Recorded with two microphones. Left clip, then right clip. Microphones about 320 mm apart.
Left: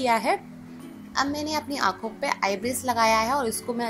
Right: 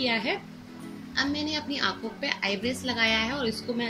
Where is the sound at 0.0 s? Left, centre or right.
Centre.